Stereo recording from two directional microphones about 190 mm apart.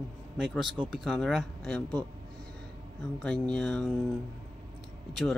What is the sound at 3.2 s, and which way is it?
Speech, 5° left (ahead or behind).